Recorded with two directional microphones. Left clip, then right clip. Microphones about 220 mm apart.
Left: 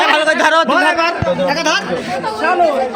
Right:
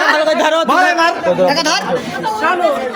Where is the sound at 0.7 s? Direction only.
25° right (ahead or behind).